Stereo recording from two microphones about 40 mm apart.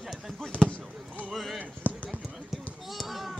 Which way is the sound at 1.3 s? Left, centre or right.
Centre.